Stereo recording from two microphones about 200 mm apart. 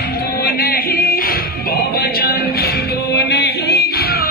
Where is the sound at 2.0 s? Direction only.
50° left (ahead or behind).